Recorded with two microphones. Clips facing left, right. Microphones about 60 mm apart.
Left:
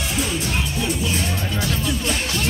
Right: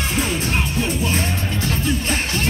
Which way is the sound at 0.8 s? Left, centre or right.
Right.